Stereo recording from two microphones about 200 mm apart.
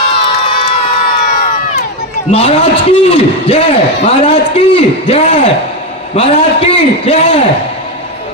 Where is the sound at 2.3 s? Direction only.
30° left (ahead or behind).